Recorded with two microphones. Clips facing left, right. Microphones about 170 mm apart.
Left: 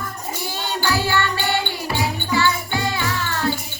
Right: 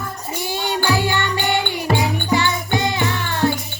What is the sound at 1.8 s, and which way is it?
Music, 55° right (ahead or behind).